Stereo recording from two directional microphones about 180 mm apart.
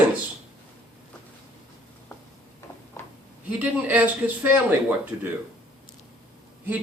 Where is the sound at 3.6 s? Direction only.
10° right (ahead or behind).